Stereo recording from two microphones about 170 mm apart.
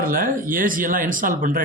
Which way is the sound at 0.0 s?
55° right (ahead or behind).